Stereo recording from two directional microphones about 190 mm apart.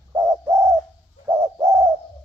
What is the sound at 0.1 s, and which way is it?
Bird, 15° right (ahead or behind).